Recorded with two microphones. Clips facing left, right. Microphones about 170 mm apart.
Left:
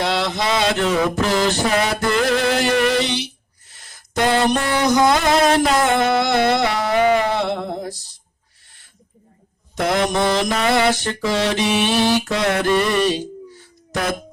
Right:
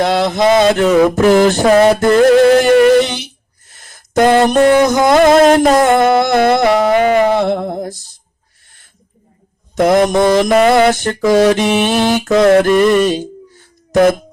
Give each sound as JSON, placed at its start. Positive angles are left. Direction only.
{"t": 0.0, "sound": "mantra", "side_deg": -50}
{"t": 1.7, "sound": "a sound", "side_deg": -50}
{"t": 9.7, "sound": "mantra", "side_deg": -50}